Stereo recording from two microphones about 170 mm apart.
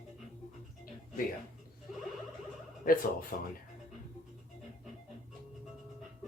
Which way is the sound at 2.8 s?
55° left (ahead or behind).